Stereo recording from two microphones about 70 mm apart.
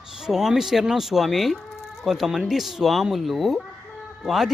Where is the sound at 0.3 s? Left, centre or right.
Centre.